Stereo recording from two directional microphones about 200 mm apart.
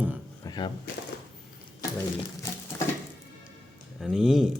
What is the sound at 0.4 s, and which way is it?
Door, 20° left (ahead or behind).